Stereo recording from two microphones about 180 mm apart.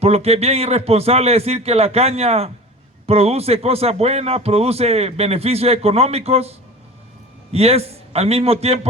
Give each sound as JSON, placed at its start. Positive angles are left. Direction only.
{"t": 0.0, "sound": "a man's voice", "side_deg": -35}